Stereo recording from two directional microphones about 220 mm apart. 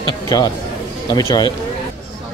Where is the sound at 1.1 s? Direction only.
15° left (ahead or behind).